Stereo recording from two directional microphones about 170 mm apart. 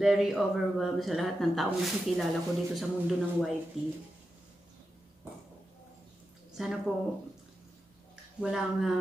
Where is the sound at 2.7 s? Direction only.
Centre (ahead or behind).